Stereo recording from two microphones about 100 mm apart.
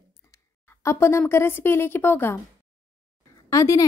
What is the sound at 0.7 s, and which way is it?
A woman's voice, 25° left (ahead or behind).